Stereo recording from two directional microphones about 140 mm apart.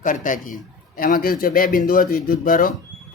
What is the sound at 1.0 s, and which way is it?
Speech, 90° left.